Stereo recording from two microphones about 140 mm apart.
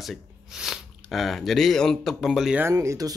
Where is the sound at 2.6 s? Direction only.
20° right (ahead or behind).